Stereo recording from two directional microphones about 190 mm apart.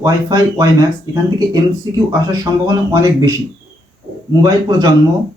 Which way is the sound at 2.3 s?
20° right (ahead or behind).